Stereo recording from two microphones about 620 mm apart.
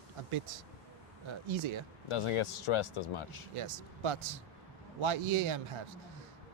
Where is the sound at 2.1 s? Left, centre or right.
Left.